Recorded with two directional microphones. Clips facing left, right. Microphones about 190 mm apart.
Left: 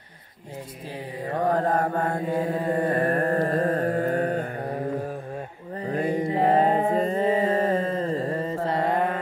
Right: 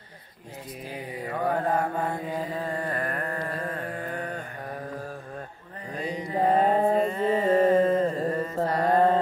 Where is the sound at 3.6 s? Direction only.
40° left (ahead or behind).